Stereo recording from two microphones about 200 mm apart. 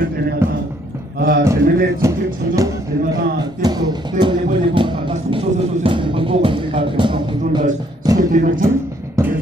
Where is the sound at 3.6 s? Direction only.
20° right (ahead or behind).